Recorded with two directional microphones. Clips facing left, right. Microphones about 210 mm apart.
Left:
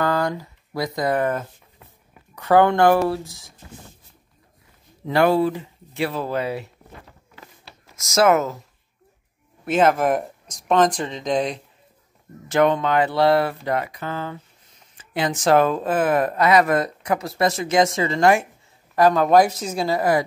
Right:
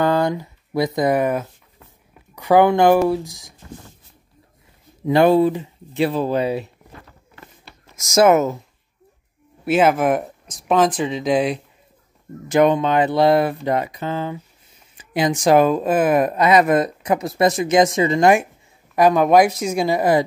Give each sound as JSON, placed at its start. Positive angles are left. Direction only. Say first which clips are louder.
{"t": 0.0, "sound": "speech", "louder": "right 4 dB", "side_deg": -25}
{"t": 5.0, "sound": "speech", "louder": "right 4 dB", "side_deg": -20}
{"t": 7.9, "sound": "speech", "louder": "right 3 dB", "side_deg": -20}
{"t": 9.7, "sound": "speech", "louder": "right 2 dB", "side_deg": -5}